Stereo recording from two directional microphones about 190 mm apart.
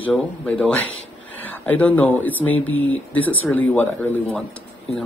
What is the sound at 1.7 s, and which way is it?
Speech, 10° left (ahead or behind).